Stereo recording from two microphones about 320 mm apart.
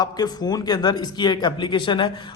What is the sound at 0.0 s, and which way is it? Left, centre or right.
A man's voice, centre.